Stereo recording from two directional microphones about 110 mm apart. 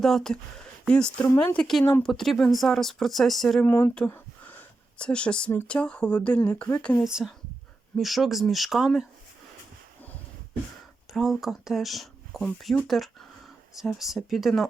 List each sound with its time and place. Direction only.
0.0 s speech: 5° left (ahead or behind)
1.8 s speech: 15° left (ahead or behind)
2.0 s speech: 5° left (ahead or behind)
3.7 s speech: 20° left (ahead or behind)
4.1 s a sound: 15° left (ahead or behind)
5.6 s speech: 10° left (ahead or behind)
7.0 s speech: 5° right (ahead or behind)
11.1 s speech: centre (ahead or behind)